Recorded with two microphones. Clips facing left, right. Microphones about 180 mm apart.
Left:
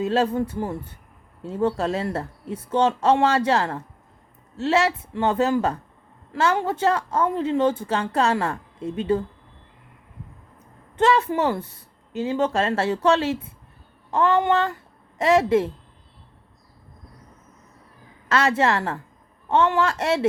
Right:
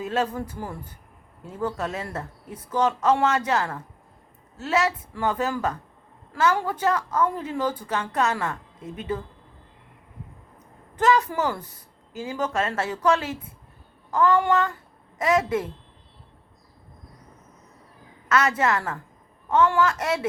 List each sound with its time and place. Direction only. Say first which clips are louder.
0.0 s a woman's voice: left 5 dB; 30° left (ahead or behind)
10.9 s a woman's voice: left 2 dB; 25° left (ahead or behind)
18.3 s a woman's voice: left 2 dB; 30° left (ahead or behind)